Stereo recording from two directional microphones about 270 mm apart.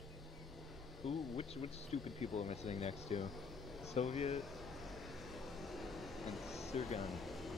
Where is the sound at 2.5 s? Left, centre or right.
Left.